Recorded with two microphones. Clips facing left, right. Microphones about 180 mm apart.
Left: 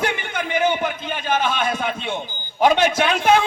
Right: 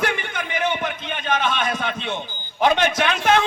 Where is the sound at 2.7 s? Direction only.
30° left (ahead or behind).